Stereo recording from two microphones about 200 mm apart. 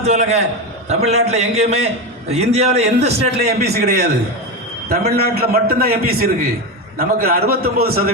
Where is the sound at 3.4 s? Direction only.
55° right (ahead or behind).